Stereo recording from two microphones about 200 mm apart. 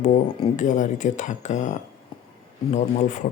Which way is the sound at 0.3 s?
35° left (ahead or behind).